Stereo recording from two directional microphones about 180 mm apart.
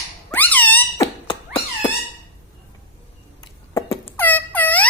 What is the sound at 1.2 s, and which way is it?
Cat, 25° left (ahead or behind).